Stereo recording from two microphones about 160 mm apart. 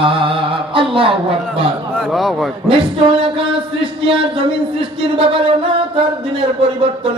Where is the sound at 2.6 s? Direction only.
35° right (ahead or behind).